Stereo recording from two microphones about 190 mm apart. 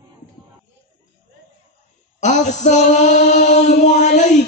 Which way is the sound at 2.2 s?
40° left (ahead or behind).